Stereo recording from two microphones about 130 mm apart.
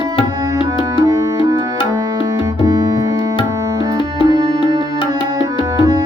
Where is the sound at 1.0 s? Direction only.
30° right (ahead or behind).